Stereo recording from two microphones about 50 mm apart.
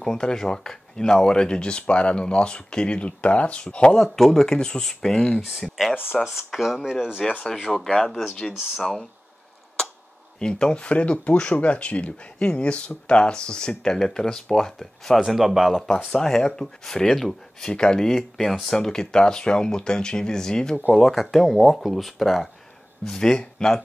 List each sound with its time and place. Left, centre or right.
0.0 s speech: centre
4.0 s speech: centre
5.5 s speech: centre
7.7 s speech: centre
10.4 s speech: centre
15.1 s speech: centre
16.1 s speech: centre
20.9 s speech: centre
23.0 s speech: centre